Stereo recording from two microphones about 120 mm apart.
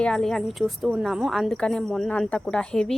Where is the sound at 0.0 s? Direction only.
5° left (ahead or behind).